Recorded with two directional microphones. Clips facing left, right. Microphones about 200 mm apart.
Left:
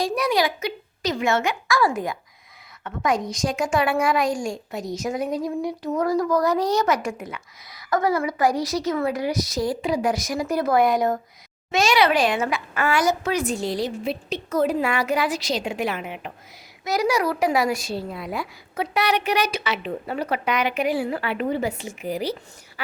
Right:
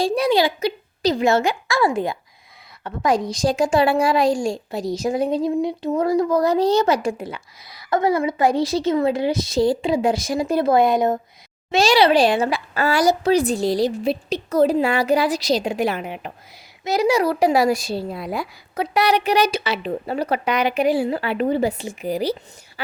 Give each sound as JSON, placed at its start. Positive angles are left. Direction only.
{"t": 0.0, "sound": "a woman's voice", "side_deg": -30}
{"t": 16.8, "sound": "a woman's voice", "side_deg": -25}